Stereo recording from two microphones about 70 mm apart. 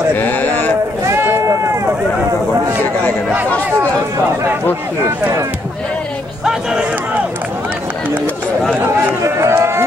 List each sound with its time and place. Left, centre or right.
0.2 s sheep: left
1.0 s run: right
9.2 s a man's voice: right